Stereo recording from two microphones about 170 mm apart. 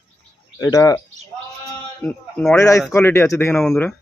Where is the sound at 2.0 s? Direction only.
10° left (ahead or behind).